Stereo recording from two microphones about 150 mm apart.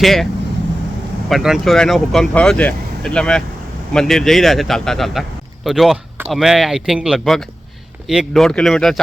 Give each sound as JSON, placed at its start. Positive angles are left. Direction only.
{"t": 0.0, "sound": "speech", "side_deg": 0}
{"t": 1.3, "sound": "speech", "side_deg": -5}